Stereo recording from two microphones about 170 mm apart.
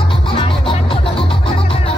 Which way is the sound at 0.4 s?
30° left (ahead or behind).